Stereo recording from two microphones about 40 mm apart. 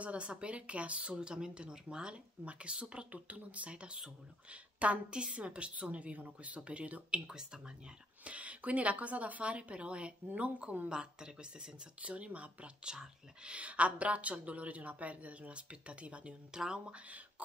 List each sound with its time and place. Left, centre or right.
0.0 s a woman's voice: right
8.2 s a woman's voice: right
10.9 s speech: right
12.0 s a woman's voice: right
16.5 s speech: centre